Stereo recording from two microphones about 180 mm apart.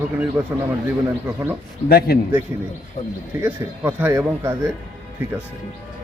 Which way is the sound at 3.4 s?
10° right (ahead or behind).